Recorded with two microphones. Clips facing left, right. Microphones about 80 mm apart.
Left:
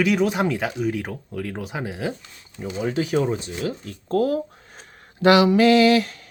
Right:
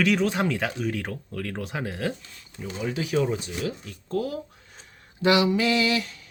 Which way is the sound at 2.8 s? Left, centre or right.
Left.